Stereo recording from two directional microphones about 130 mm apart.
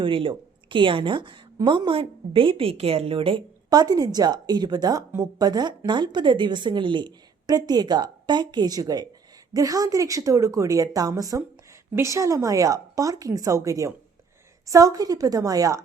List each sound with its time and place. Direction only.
0.0 s a woman's voice: 40° right (ahead or behind)
3.7 s a woman's voice: 30° right (ahead or behind)